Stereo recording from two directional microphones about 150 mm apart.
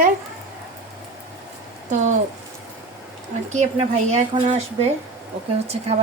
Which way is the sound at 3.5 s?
50° right (ahead or behind).